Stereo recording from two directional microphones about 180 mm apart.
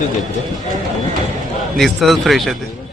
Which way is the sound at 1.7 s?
Centre (ahead or behind).